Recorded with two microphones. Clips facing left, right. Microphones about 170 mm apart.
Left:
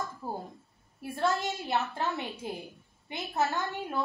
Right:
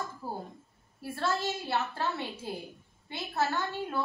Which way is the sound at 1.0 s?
15° left (ahead or behind).